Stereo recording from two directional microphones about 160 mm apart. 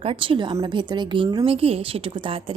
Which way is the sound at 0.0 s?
35° right (ahead or behind).